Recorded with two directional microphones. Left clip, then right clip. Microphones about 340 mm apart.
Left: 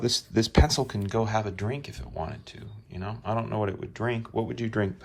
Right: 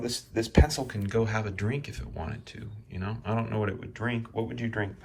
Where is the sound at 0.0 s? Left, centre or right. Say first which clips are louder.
Left 5 dB; centre.